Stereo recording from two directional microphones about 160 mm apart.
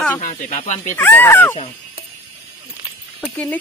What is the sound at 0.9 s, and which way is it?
Speech, 10° left (ahead or behind).